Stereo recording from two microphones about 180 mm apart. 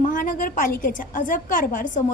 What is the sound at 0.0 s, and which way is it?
A woman's voice, 45° left (ahead or behind).